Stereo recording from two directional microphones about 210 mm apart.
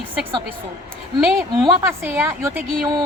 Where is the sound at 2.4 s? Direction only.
15° right (ahead or behind).